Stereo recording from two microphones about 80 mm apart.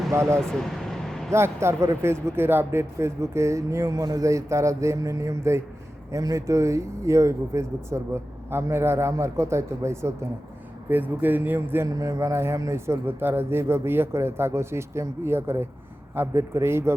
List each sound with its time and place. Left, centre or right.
0.1 s speech: right
0.3 s vehicle: centre
1.3 s speech: right
10.8 s speech: right
11.9 s speech: right